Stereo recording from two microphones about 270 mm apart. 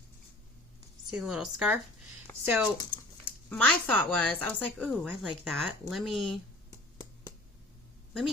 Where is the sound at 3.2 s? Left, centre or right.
Centre.